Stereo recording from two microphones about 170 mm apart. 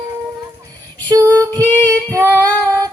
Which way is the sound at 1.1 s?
15° right (ahead or behind).